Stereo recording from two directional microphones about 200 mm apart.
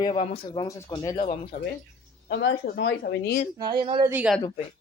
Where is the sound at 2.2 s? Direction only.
60° left (ahead or behind).